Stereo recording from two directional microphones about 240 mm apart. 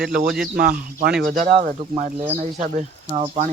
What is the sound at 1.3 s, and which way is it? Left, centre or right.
Speech, right.